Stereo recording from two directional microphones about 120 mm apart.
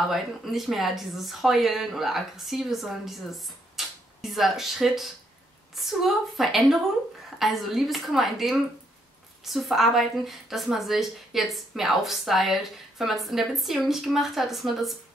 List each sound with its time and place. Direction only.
0.1 s a woman's voice: centre (ahead or behind)